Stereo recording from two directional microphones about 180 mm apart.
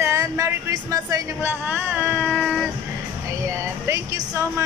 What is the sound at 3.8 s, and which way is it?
Speech, 15° right (ahead or behind).